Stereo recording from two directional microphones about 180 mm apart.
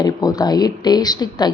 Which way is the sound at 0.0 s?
20° left (ahead or behind).